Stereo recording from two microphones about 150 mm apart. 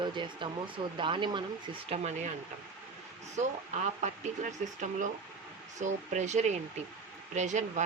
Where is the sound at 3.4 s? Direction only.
50° right (ahead or behind).